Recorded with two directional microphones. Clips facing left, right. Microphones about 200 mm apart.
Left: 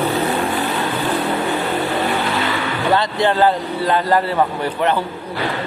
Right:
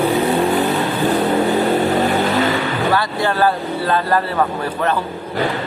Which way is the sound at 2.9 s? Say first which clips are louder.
Left 2 dB; 20° left (ahead or behind).